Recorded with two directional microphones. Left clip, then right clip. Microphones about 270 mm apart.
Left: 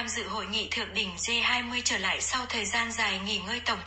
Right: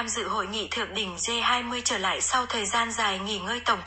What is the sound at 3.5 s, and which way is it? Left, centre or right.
Speech, centre.